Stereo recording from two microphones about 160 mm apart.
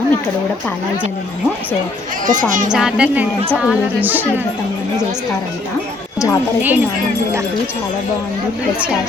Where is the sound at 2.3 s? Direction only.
55° right (ahead or behind).